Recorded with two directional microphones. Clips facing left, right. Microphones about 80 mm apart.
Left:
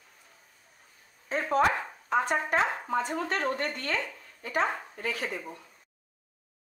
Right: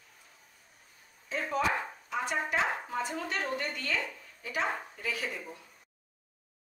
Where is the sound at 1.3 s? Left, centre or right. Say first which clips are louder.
Left 5 dB; left.